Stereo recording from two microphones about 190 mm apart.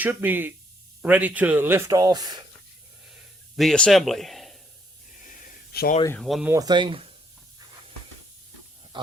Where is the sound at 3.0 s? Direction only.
Centre (ahead or behind).